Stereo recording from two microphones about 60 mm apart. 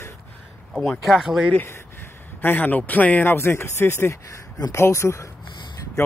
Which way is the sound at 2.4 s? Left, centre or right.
Left.